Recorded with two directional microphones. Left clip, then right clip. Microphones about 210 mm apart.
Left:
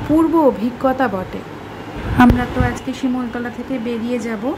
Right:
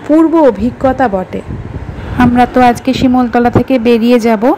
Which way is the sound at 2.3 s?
30° right (ahead or behind).